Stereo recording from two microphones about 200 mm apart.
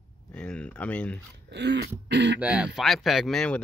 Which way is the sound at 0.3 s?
5° left (ahead or behind).